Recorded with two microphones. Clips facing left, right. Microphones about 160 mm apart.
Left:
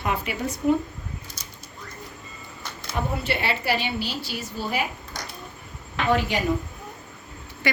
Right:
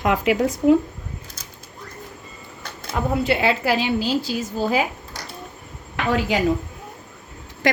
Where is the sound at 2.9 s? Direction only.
90° right.